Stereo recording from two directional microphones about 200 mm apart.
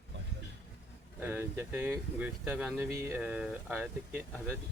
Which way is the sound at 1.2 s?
10° right (ahead or behind).